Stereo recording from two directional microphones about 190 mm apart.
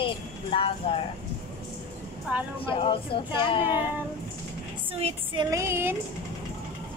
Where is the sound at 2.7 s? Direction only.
30° left (ahead or behind).